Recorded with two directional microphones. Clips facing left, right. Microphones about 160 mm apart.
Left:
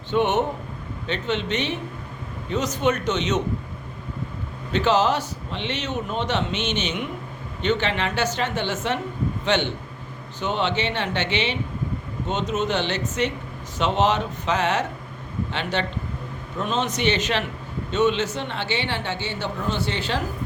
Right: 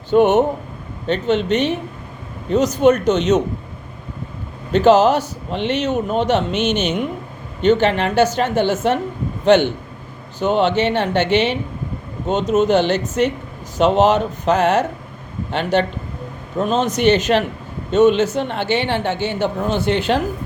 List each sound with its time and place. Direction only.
0.1 s speech: 40° right (ahead or behind)
4.7 s speech: 45° right (ahead or behind)